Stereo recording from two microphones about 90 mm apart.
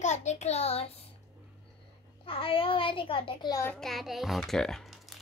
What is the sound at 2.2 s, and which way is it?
A child's voice, 90° left.